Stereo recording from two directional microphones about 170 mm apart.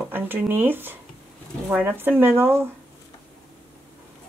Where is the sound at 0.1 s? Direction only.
10° right (ahead or behind).